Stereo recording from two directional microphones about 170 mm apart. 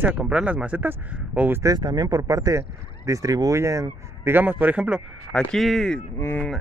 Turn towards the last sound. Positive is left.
turn(degrees=15)  # may be behind; listen again after turning